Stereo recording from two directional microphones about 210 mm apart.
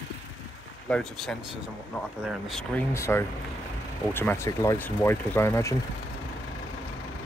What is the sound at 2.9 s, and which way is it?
Speech, 10° left (ahead or behind).